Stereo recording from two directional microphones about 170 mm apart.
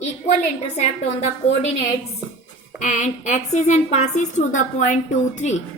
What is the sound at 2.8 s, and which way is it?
A woman's voice, 45° left (ahead or behind).